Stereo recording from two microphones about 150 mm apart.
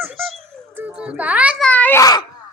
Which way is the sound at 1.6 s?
10° left (ahead or behind).